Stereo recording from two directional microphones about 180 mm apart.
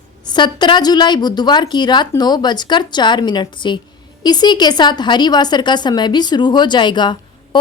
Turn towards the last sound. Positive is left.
turn(degrees=25)  # may be behind; listen again after turning